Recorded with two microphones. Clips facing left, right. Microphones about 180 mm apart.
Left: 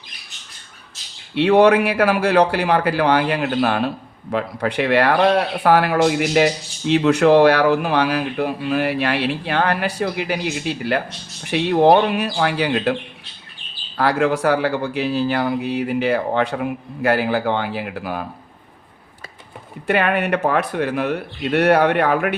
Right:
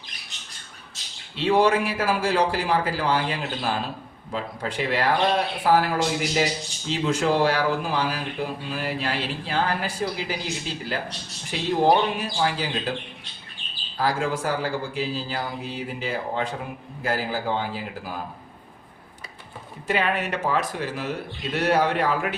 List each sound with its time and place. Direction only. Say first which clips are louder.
1.4 s a man's voice: left 7 dB; 65° left (ahead or behind)
19.9 s speech: left 6 dB; 60° left (ahead or behind)